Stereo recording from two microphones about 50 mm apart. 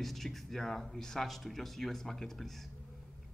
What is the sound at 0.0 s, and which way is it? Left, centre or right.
A man's voice, centre.